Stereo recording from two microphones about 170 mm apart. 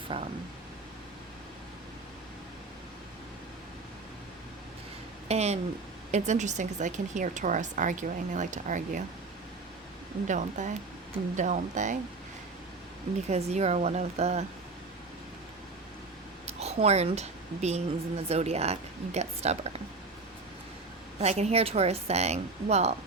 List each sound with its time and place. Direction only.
0.1 s a woman's voice: 35° right (ahead or behind)
5.3 s a woman's voice: 40° right (ahead or behind)
10.2 s speech: 45° right (ahead or behind)
13.2 s a woman's voice: 40° right (ahead or behind)
16.5 s a woman's voice: 40° right (ahead or behind)
21.2 s a woman's voice: 40° right (ahead or behind)